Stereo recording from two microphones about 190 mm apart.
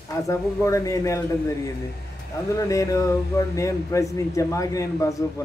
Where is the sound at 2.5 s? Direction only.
15° left (ahead or behind).